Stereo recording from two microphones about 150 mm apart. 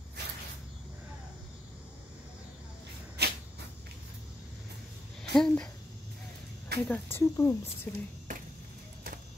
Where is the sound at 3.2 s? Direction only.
90° right.